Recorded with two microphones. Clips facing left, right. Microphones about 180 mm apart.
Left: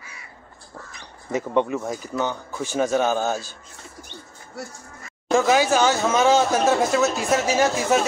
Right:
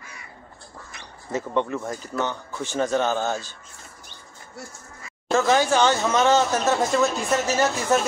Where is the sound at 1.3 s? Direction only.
15° left (ahead or behind).